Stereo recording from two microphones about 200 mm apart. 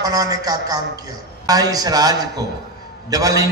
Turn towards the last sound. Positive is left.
turn(degrees=-15)  # may be behind; listen again after turning